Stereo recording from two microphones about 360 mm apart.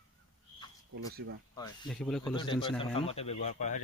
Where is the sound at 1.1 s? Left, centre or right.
Right.